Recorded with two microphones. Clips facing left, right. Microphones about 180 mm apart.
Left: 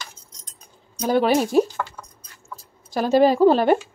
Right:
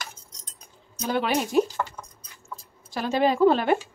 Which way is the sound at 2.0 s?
10° right (ahead or behind).